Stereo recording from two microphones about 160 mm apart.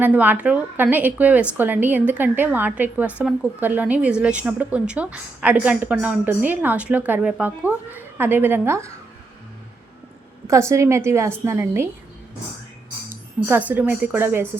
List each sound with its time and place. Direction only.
0.0 s a woman's voice: 10° right (ahead or behind)
10.4 s a woman's voice: 15° right (ahead or behind)
13.1 s speech: 10° right (ahead or behind)